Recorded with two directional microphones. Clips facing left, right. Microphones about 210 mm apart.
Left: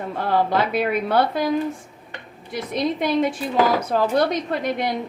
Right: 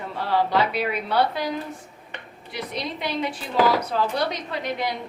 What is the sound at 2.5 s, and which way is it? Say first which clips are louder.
Speech: left 7 dB; 50° left (ahead or behind).